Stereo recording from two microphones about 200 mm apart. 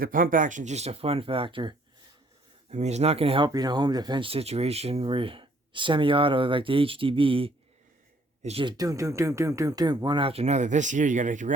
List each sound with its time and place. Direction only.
0.0 s speech: 45° right (ahead or behind)
8.8 s speech: 15° right (ahead or behind); by 11.5 s 40° right (ahead or behind)